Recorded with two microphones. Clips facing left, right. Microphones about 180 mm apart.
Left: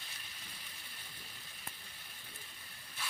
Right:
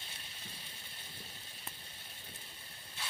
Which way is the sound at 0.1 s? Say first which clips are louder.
Right 2 dB; 25° right (ahead or behind).